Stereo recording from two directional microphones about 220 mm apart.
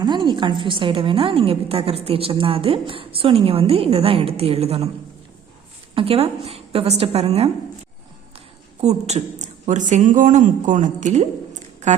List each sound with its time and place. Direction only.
0.0 s a woman's voice: 20° right (ahead or behind)
5.9 s a woman's voice: 25° right (ahead or behind)
8.8 s speech: 30° right (ahead or behind)